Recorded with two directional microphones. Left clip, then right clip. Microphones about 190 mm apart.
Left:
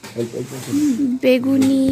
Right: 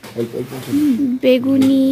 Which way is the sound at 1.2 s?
5° right (ahead or behind).